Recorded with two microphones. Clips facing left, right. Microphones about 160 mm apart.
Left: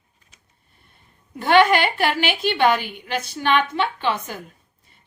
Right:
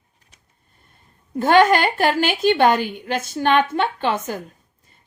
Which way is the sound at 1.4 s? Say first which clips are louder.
Right 2 dB; 45° right (ahead or behind).